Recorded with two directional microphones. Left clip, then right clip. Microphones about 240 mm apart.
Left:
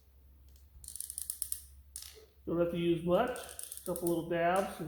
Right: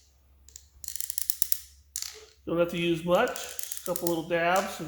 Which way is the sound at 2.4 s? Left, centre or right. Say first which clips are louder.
Right 5 dB; right.